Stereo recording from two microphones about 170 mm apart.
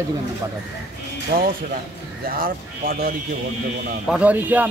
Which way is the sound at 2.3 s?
55° right (ahead or behind).